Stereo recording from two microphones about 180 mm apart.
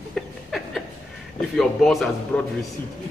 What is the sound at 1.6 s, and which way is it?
Speech, centre (ahead or behind).